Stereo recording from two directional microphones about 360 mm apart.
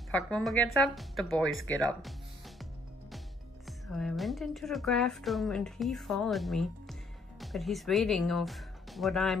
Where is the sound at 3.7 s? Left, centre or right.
Centre.